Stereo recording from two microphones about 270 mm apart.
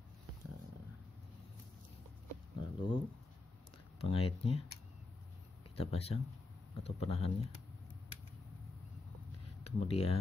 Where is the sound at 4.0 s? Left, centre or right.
Left.